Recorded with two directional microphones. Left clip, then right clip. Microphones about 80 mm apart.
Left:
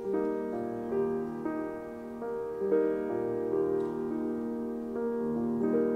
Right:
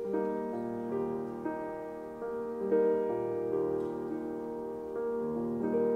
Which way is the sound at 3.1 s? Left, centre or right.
Left.